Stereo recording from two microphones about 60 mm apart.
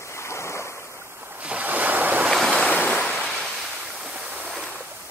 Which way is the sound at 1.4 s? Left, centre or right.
Right.